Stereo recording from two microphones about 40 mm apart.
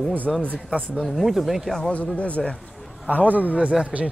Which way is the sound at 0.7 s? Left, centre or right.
Right.